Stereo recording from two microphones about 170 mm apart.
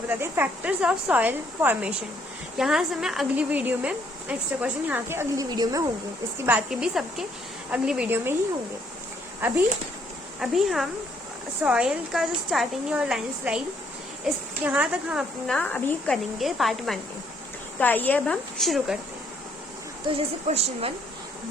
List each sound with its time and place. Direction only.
0.1 s a woman's voice: 10° right (ahead or behind)
6.4 s a woman's voice: 5° right (ahead or behind)
9.4 s a woman's voice: 10° right (ahead or behind)
15.5 s a woman's voice: 5° left (ahead or behind)
20.1 s a woman's voice: 35° right (ahead or behind)